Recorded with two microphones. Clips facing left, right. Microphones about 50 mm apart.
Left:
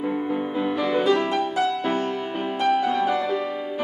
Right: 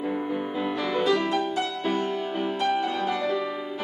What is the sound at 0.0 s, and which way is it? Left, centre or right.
Music, centre.